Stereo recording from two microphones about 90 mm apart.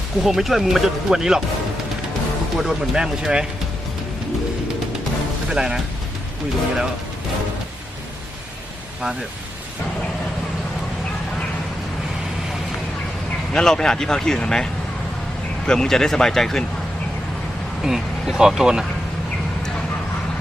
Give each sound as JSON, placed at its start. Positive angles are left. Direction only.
{"t": 0.2, "sound": "speech", "side_deg": 0}
{"t": 2.6, "sound": "speech", "side_deg": -5}
{"t": 5.5, "sound": "speech", "side_deg": -5}
{"t": 13.5, "sound": "speech", "side_deg": 5}
{"t": 17.8, "sound": "speech", "side_deg": -5}